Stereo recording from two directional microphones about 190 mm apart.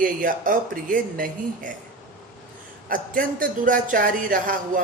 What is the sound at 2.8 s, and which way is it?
Speech, 45° right (ahead or behind).